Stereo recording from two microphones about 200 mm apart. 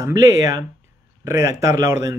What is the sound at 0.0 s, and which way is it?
Speech, 15° right (ahead or behind).